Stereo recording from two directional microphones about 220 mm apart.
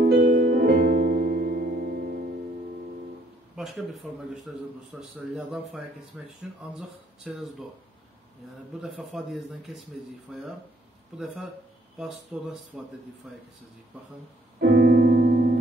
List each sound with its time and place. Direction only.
0.3 s music: 40° right (ahead or behind)
3.5 s a man's voice: centre (ahead or behind)
8.9 s a man's voice: centre (ahead or behind)
12.3 s a man's voice: 5° right (ahead or behind)
14.6 s piano: 50° right (ahead or behind)